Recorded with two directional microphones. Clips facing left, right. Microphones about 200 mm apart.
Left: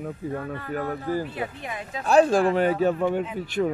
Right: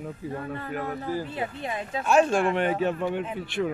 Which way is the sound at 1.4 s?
30° right (ahead or behind).